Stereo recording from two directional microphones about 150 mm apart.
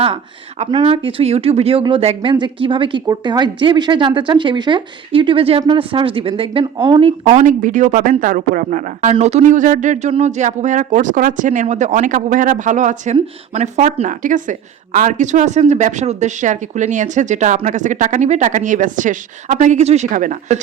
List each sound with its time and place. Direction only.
0.7 s speech: 35° right (ahead or behind); by 20.6 s 60° right (ahead or behind)